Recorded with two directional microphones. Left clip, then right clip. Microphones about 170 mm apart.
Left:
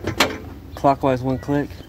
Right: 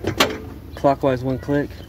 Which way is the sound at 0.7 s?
65° left (ahead or behind).